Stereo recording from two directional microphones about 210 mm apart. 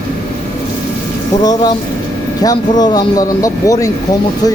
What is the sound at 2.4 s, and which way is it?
Speech, 20° left (ahead or behind).